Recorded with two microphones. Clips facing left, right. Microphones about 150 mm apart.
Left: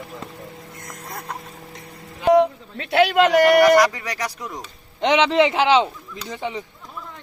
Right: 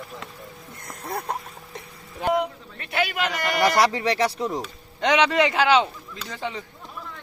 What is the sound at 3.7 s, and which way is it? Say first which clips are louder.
Speech: left 3 dB; 30° right (ahead or behind).